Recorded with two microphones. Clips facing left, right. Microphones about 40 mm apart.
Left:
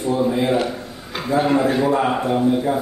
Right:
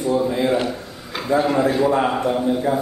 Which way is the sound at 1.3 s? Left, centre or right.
Right.